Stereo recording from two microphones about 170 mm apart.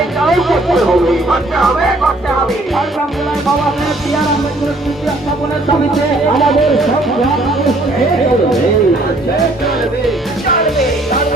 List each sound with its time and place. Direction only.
0.2 s speech: centre (ahead or behind)
6.4 s speech: centre (ahead or behind)